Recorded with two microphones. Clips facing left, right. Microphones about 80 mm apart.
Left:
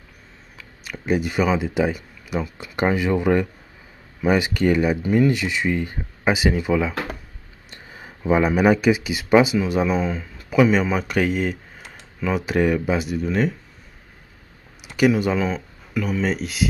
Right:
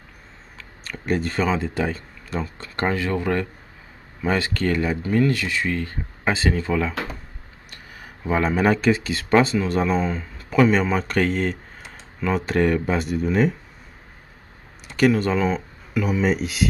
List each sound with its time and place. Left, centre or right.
0.6 s speech: centre
7.7 s speech: left; by 13.6 s centre
14.9 s speech: centre